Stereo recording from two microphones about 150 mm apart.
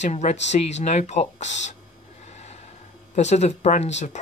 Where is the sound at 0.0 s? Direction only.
50° left (ahead or behind).